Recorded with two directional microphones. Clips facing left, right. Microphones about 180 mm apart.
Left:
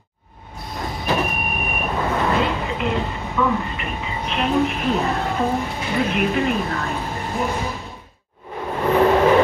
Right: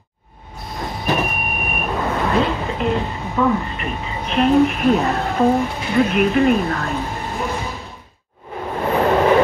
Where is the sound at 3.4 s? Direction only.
40° right (ahead or behind).